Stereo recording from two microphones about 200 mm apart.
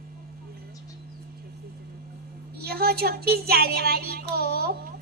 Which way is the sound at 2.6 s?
50° right (ahead or behind).